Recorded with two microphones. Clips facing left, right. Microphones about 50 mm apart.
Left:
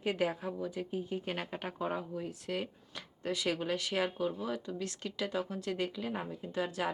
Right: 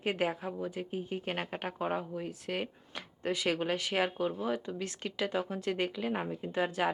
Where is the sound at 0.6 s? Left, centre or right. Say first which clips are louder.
Even; right.